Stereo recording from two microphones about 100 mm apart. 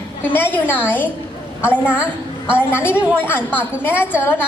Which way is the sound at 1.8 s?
15° right (ahead or behind).